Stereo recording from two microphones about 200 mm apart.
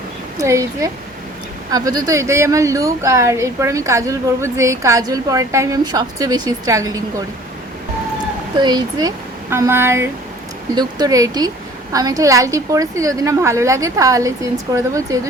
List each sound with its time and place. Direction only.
0.3 s speech: 15° right (ahead or behind)
8.5 s speech: 20° right (ahead or behind)